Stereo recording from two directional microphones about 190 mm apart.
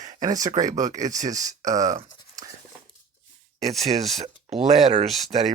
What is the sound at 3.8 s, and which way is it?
Speech, 35° right (ahead or behind).